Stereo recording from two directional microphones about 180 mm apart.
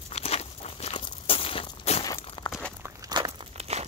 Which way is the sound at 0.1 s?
35° left (ahead or behind).